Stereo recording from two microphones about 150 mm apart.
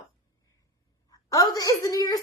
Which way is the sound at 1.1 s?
25° left (ahead or behind).